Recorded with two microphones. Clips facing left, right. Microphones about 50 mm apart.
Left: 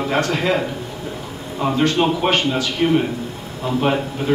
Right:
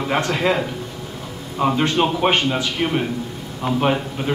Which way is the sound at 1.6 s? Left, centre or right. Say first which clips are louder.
Even; centre.